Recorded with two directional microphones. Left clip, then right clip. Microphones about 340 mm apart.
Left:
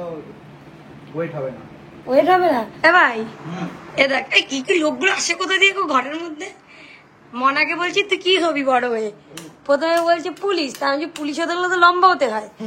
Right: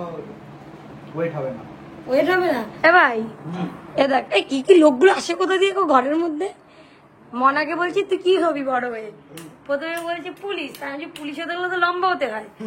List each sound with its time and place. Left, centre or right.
2.0 s a woman's voice: centre